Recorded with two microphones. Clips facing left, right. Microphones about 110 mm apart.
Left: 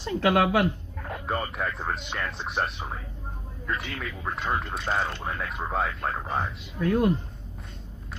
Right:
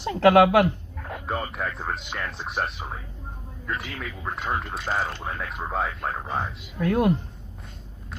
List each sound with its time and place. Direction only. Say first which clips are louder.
0.0 s speech: right 6 dB; 75° right (ahead or behind)
1.0 s a sound: even; centre (ahead or behind)
1.8 s speech: even; centre (ahead or behind)
6.8 s speech: right 1 dB; 70° right (ahead or behind)